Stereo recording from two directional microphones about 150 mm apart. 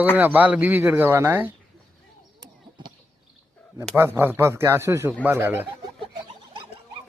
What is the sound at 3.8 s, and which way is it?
A man's voice, 15° right (ahead or behind).